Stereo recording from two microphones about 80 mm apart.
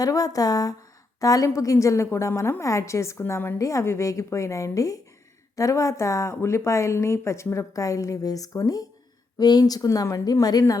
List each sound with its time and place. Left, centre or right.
0.0 s a woman's voice: left
3.6 s a woman's voice: left